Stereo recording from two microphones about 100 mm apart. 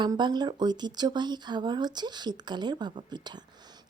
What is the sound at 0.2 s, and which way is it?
A woman's voice, 45° right (ahead or behind).